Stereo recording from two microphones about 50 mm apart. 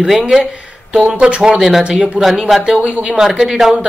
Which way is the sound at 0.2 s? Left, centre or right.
Centre.